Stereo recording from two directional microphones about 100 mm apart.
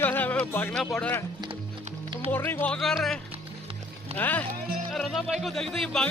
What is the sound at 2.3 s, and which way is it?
Speech, 20° left (ahead or behind).